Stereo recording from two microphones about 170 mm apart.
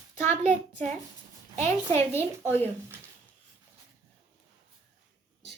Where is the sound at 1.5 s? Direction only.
40° right (ahead or behind).